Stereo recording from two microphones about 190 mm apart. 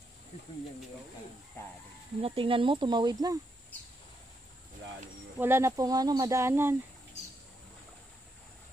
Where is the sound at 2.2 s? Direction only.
30° right (ahead or behind).